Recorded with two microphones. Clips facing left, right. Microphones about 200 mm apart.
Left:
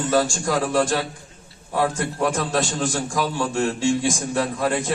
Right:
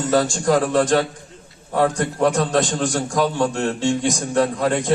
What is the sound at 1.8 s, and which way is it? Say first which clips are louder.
Speech: right 4 dB; 40° right (ahead or behind).